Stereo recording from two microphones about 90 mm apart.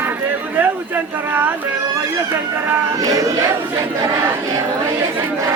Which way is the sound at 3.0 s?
40° right (ahead or behind).